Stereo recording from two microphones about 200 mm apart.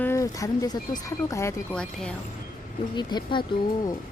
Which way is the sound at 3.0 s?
20° left (ahead or behind).